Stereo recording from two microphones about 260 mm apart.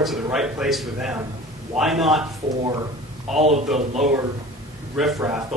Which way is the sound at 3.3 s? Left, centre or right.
Right.